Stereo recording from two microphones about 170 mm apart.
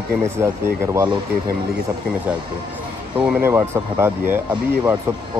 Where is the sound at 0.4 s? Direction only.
15° right (ahead or behind).